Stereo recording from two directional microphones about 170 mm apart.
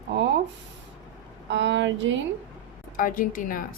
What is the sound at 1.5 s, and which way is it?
Speech, 90° right.